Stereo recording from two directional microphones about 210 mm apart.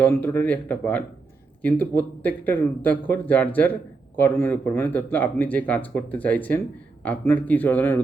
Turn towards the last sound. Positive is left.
turn(degrees=10)  # may be behind; listen again after turning